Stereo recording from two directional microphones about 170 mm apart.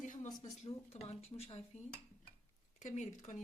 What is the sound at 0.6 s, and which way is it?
A woman's voice, 40° left (ahead or behind).